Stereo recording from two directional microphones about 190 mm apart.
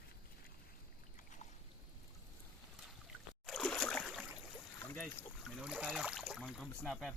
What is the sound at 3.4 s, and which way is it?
Boat, centre (ahead or behind).